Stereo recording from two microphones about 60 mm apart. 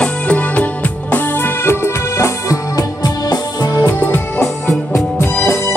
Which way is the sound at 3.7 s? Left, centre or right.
Left.